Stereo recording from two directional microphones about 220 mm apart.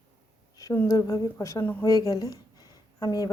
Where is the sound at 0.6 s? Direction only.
15° left (ahead or behind).